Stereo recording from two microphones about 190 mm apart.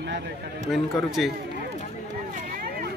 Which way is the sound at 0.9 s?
Centre (ahead or behind).